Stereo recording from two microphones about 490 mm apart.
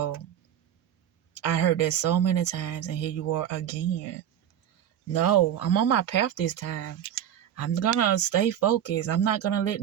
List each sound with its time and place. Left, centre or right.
1.3 s a woman's voice: left
5.1 s a woman's voice: left